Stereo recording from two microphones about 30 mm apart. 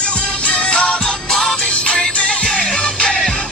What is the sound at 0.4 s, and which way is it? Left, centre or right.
Music, left.